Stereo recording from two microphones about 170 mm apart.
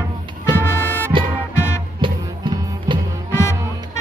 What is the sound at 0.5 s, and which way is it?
Music, 10° left (ahead or behind).